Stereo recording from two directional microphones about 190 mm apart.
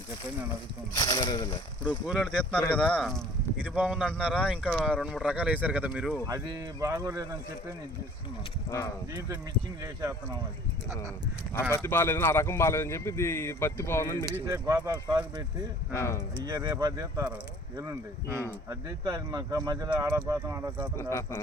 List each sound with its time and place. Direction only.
0.9 s speech: 20° left (ahead or behind)
2.0 s speech: centre (ahead or behind)
6.2 s speech: 20° right (ahead or behind)
9.8 s speech: 15° right (ahead or behind)
11.7 s speech: 10° left (ahead or behind)
14.4 s speech: 20° right (ahead or behind)
15.9 s speech: 15° left (ahead or behind)
16.4 s speech: 20° right (ahead or behind)
20.9 s speech: 15° left (ahead or behind)